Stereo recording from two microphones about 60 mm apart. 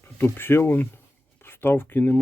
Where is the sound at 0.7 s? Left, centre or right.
Left.